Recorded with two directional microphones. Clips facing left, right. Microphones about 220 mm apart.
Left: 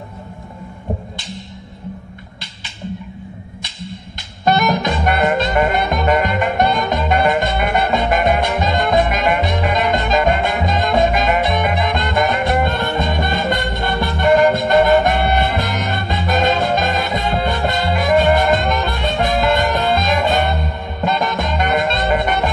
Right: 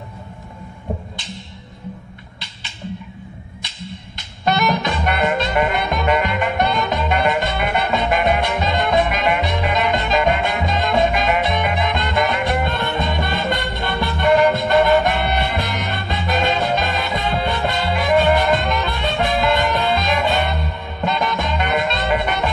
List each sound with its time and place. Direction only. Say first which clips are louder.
4.5 s music: left 3 dB; 45° left (ahead or behind)